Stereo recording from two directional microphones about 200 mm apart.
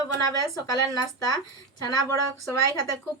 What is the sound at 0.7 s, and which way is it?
Speech, 20° left (ahead or behind).